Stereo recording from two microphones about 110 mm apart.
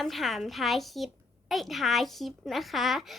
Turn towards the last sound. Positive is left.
turn(degrees=0)  # may be behind; listen again after turning